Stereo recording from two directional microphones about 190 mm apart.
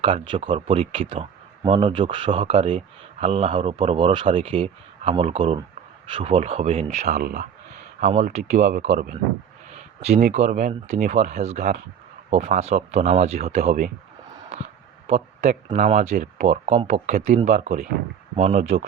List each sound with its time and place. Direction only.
0.0 s speech: 25° right (ahead or behind)
7.2 s speech: 55° right (ahead or behind)
7.9 s speech: 40° right (ahead or behind)
10.2 s speech: 35° right (ahead or behind)